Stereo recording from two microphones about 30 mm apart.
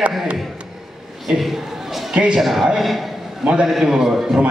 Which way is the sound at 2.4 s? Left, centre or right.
Centre.